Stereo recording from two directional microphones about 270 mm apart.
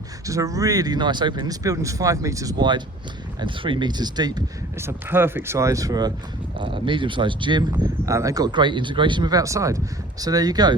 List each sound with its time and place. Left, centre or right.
0.3 s speech: centre